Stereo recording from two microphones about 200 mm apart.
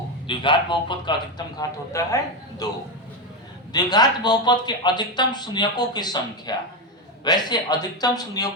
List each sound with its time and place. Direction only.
0.3 s speech: 25° left (ahead or behind)
3.7 s speech: 20° left (ahead or behind)